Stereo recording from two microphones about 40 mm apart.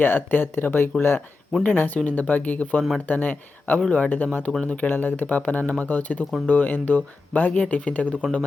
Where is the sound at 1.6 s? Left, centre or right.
Left.